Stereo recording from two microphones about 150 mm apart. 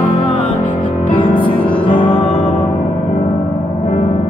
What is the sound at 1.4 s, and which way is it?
Music, 35° left (ahead or behind).